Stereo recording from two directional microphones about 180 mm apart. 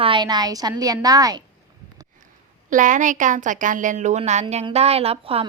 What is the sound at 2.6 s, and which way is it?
A woman's voice, 45° right (ahead or behind).